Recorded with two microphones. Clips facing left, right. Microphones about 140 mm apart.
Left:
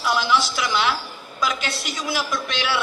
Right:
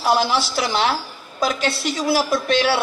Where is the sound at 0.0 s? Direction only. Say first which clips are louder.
Right 3 dB; 35° right (ahead or behind).